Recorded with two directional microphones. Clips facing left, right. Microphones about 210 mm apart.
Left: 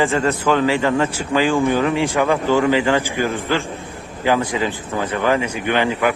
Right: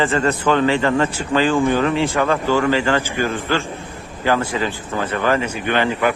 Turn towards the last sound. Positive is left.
turn(degrees=15)  # may be behind; listen again after turning